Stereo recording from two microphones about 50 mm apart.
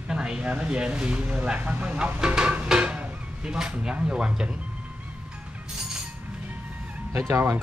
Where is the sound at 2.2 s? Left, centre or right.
Centre.